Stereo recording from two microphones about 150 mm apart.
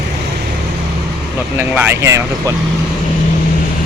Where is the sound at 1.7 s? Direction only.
15° right (ahead or behind).